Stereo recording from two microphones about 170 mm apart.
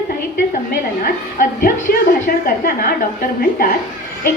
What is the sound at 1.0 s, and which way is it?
A woman's voice, 60° left (ahead or behind).